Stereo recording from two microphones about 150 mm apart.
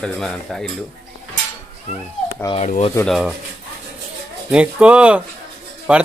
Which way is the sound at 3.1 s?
5° right (ahead or behind).